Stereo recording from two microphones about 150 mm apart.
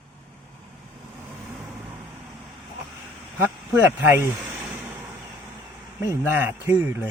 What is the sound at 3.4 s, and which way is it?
Speech, 15° right (ahead or behind).